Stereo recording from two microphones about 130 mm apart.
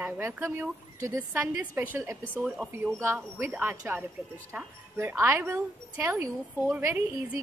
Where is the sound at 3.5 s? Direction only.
15° right (ahead or behind).